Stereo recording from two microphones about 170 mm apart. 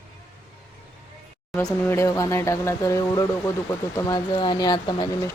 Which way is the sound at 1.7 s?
15° left (ahead or behind).